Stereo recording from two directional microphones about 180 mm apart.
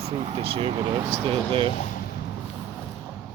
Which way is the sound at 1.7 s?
45° left (ahead or behind).